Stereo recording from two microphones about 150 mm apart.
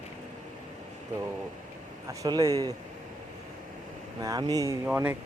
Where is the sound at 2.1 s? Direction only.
20° right (ahead or behind).